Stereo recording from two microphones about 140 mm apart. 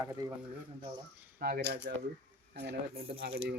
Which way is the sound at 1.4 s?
90° right.